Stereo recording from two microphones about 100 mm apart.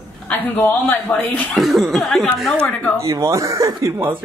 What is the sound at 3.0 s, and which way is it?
Speech, 35° right (ahead or behind).